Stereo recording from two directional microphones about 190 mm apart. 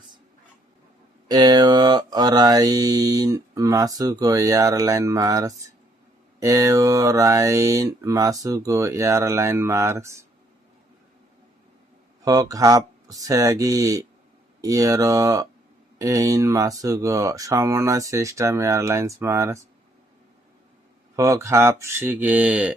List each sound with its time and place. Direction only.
1.3 s mantra: 20° right (ahead or behind)
12.2 s mantra: 20° right (ahead or behind)
21.2 s mantra: 15° right (ahead or behind)